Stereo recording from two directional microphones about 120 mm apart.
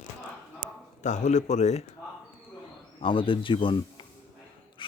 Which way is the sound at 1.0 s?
90° left.